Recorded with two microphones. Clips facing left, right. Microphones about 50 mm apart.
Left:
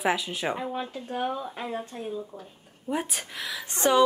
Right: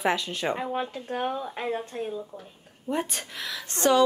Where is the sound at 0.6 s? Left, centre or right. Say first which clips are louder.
Right 2 dB; right.